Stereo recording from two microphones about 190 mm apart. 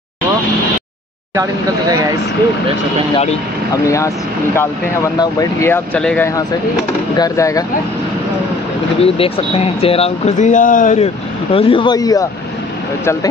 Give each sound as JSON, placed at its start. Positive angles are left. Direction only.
{"t": 1.3, "sound": "speech", "side_deg": -15}
{"t": 3.8, "sound": "speech", "side_deg": 15}
{"t": 9.0, "sound": "speech", "side_deg": 30}
{"t": 11.5, "sound": "speech", "side_deg": 30}